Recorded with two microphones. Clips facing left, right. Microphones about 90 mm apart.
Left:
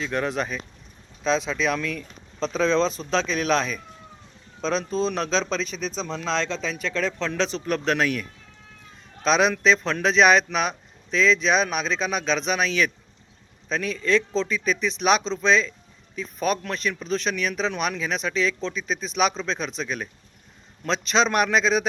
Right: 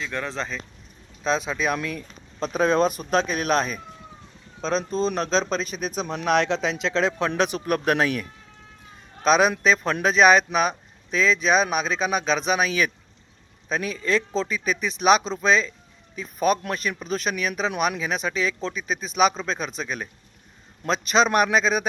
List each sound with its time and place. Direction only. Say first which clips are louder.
0.0 s speech: left 4 dB; 15° left (ahead or behind)
1.2 s speech: left 1 dB; 5° right (ahead or behind)
3.1 s speech: right 1 dB; 50° right (ahead or behind)
4.6 s speech: even; centre (ahead or behind)
5.7 s speech: right 1 dB; 30° right (ahead or behind)
6.2 s speech: right 6 dB; 70° right (ahead or behind)
6.7 s speech: right 3 dB; 20° right (ahead or behind)
9.2 s speech: right 1 dB; 5° right (ahead or behind)